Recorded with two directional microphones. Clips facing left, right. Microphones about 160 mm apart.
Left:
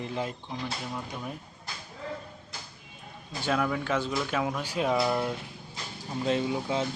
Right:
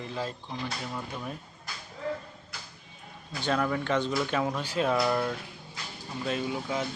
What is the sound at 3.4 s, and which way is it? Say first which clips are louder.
Speech: even; 5° left (ahead or behind).